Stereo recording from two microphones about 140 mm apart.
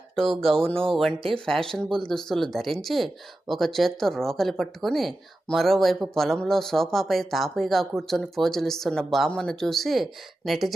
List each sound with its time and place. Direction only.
0.2 s speech: 5° left (ahead or behind)
0.7 s speech: 40° right (ahead or behind)
0.9 s speech: centre (ahead or behind)